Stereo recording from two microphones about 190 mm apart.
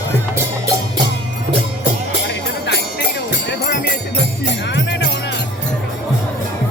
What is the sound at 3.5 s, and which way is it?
Music, 55° left (ahead or behind).